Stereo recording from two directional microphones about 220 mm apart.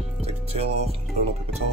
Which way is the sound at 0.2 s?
25° right (ahead or behind).